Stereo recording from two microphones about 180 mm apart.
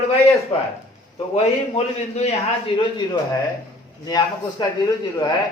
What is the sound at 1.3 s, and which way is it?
A man's voice, 35° left (ahead or behind).